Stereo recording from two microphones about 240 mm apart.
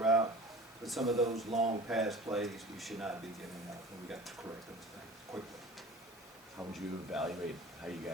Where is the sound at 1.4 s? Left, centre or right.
Right.